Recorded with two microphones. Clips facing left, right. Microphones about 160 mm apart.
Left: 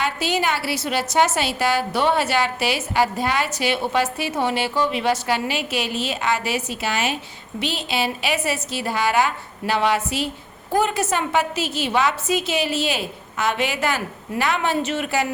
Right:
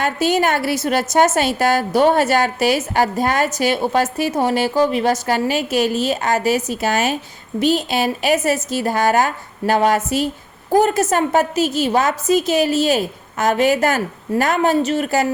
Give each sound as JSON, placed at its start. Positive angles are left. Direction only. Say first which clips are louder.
{"t": 0.0, "sound": "a woman's voice", "louder": "right 5 dB", "side_deg": -45}